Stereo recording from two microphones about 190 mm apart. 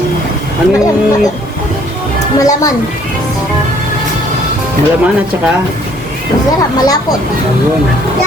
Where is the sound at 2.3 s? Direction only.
20° left (ahead or behind).